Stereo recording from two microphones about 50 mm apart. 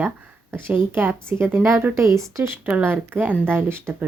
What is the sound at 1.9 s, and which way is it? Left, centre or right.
Speech, right.